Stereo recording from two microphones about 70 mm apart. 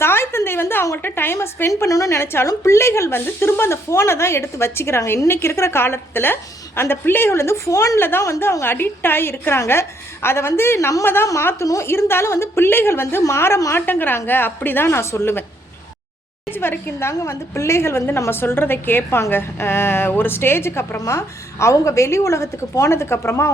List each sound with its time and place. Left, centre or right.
0.0 s a sound: left
1.0 s a woman's voice: left
1.9 s a woman's voice: left
2.1 s a woman's voice: left
7.9 s a woman's voice: left
11.0 s a woman's voice: left
11.6 s a woman's voice: left
13.7 s a woman's voice: left
14.8 s a woman's voice: left
16.5 s a woman's voice: left